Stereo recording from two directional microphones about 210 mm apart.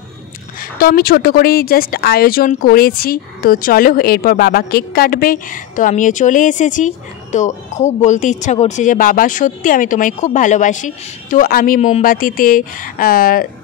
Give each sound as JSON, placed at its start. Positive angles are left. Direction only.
{"t": 0.7, "sound": "speech", "side_deg": 45}